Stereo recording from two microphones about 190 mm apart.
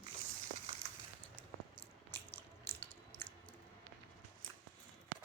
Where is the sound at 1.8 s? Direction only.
30° left (ahead or behind).